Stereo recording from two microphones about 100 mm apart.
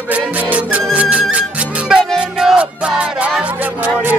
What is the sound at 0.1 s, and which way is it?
Music, 15° right (ahead or behind).